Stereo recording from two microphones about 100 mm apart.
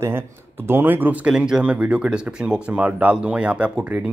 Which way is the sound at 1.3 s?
5° right (ahead or behind).